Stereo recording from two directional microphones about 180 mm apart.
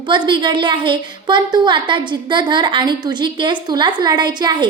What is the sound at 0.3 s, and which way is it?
A woman's voice, 25° right (ahead or behind).